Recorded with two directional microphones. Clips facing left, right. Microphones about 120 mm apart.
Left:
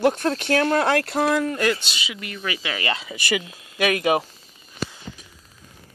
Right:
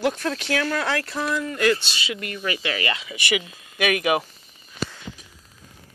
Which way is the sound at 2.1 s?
45° right (ahead or behind).